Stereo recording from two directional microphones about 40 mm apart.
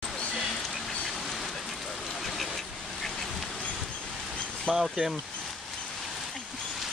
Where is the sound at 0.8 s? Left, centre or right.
Centre.